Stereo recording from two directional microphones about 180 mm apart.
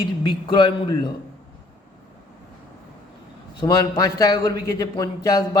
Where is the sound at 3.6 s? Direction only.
20° left (ahead or behind).